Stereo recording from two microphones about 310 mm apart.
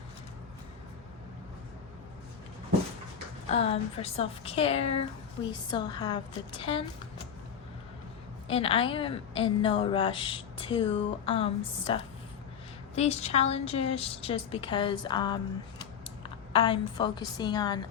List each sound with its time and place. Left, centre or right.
3.5 s a woman's voice: centre
8.4 s a woman's voice: centre